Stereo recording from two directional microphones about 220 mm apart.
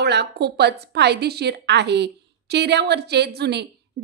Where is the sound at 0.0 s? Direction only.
50° right (ahead or behind).